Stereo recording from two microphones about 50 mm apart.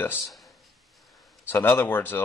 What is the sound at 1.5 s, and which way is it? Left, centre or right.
Speech, left.